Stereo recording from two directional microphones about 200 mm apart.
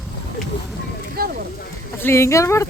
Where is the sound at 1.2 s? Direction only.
50° right (ahead or behind).